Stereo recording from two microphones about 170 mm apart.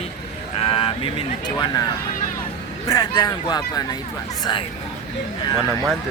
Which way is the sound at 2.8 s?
20° left (ahead or behind).